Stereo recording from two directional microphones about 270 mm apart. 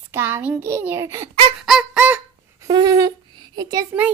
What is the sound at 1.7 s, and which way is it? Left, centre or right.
Fowl, centre.